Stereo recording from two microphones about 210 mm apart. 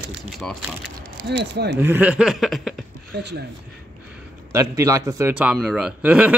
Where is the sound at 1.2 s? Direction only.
55° right (ahead or behind).